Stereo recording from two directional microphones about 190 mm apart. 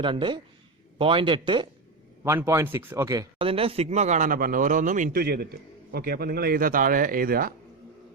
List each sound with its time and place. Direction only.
0.0 s a man's voice: 25° right (ahead or behind)
2.2 s speech: 10° right (ahead or behind)
3.3 s speech: 30° right (ahead or behind); by 7.5 s 50° right (ahead or behind)